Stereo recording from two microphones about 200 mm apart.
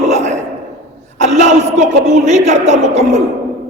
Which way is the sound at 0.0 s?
35° right (ahead or behind).